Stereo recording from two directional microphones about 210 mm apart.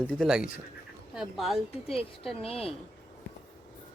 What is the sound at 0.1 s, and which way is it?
Speech, centre (ahead or behind).